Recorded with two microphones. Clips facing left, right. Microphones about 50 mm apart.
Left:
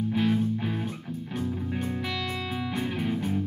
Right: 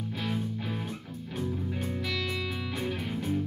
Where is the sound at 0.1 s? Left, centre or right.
Centre.